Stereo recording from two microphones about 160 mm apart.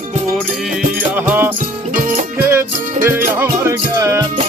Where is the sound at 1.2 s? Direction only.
10° right (ahead or behind).